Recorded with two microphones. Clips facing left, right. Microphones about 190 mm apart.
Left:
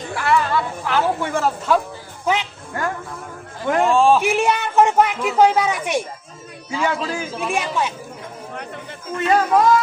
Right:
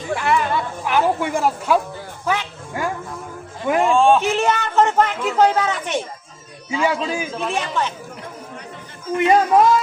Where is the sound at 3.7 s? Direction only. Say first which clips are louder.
Even; 5° right (ahead or behind).